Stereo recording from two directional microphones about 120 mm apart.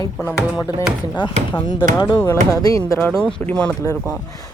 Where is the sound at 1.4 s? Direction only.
65° right (ahead or behind).